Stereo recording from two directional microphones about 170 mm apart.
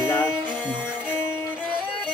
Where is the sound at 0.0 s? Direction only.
15° left (ahead or behind).